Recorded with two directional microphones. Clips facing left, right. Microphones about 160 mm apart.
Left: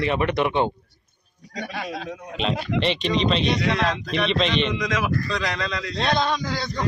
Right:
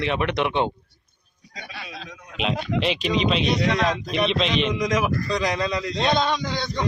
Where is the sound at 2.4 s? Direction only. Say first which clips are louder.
Even; 5° right (ahead or behind).